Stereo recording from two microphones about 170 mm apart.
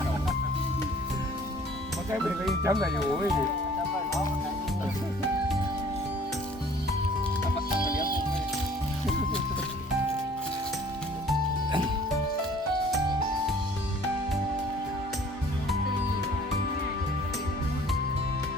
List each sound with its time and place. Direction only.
2.2 s speech: centre (ahead or behind)
2.6 s speech: 20° right (ahead or behind)
7.8 s music: 55° left (ahead or behind)